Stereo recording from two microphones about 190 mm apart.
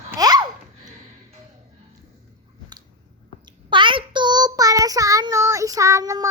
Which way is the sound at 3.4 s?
25° right (ahead or behind).